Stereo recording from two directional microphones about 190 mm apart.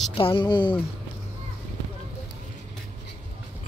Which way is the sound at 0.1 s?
30° left (ahead or behind).